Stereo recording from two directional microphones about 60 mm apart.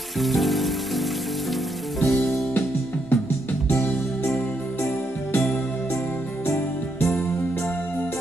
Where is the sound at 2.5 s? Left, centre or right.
Left.